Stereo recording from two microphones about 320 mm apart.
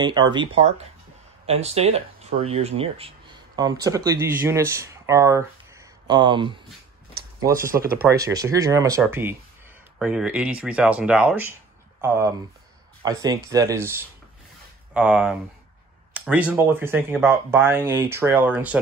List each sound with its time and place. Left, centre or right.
0.0 s speech: centre